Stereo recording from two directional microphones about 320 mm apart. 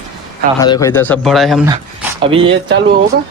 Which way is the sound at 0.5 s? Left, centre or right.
Centre.